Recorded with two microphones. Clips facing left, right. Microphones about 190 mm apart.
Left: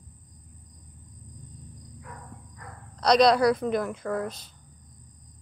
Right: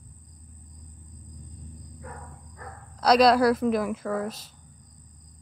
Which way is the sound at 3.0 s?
5° right (ahead or behind).